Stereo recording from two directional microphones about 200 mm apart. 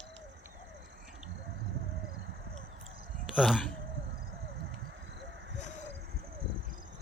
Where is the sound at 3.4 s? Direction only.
Centre (ahead or behind).